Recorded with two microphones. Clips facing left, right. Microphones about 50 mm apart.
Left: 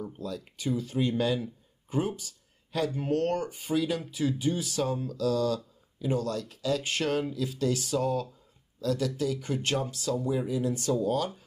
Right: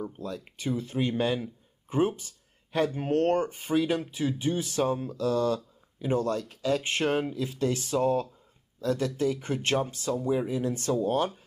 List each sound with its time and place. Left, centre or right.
0.0 s speech: right